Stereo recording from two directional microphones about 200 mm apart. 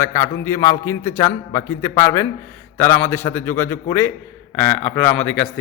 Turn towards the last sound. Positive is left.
turn(degrees=10)  # may be behind; listen again after turning